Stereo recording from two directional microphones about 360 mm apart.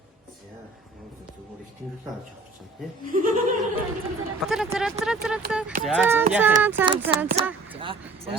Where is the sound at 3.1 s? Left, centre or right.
Right.